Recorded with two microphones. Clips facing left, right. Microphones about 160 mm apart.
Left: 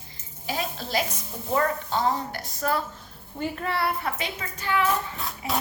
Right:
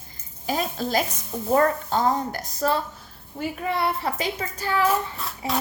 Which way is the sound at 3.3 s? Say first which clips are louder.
Right 2 dB; 5° right (ahead or behind).